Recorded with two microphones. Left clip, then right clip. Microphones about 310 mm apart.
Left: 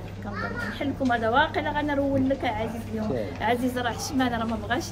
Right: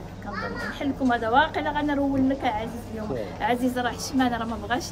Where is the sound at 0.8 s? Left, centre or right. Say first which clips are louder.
Right 1 dB; centre.